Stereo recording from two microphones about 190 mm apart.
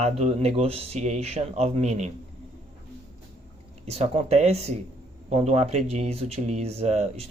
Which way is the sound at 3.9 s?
35° right (ahead or behind).